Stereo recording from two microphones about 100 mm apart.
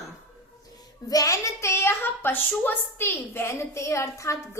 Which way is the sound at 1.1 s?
35° left (ahead or behind).